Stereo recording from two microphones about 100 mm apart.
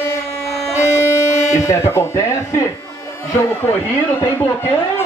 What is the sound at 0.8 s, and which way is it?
Music, 30° left (ahead or behind).